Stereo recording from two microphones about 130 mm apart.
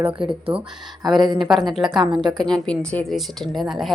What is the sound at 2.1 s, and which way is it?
Speech, 35° right (ahead or behind).